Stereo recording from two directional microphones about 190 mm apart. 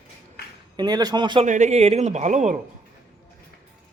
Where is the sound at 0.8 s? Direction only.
20° right (ahead or behind).